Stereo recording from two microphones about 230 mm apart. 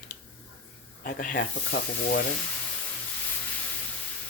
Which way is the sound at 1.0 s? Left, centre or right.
Left.